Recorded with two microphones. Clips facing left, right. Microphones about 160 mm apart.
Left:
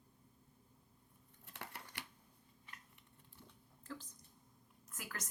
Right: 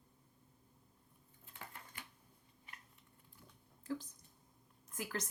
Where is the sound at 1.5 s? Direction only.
80° left.